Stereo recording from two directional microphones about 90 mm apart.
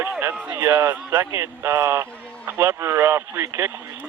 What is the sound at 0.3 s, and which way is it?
Speech, 20° right (ahead or behind).